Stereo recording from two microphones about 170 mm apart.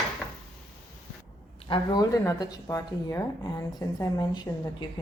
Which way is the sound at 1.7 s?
25° left (ahead or behind).